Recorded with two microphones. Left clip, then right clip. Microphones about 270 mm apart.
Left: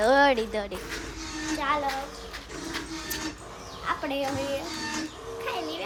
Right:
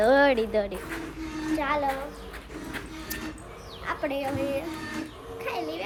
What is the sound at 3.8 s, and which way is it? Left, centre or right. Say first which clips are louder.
Speech: even; centre.